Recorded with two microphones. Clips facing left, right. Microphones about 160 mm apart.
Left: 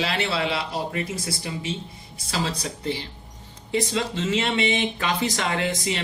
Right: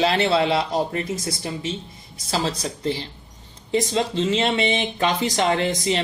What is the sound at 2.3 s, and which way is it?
Speech, 30° right (ahead or behind).